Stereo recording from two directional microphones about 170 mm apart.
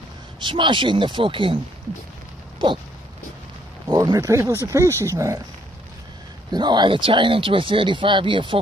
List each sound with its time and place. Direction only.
0.4 s speech: 30° right (ahead or behind)
2.6 s a sound: 25° right (ahead or behind)
3.8 s speech: 25° right (ahead or behind)
6.5 s speech: 25° right (ahead or behind)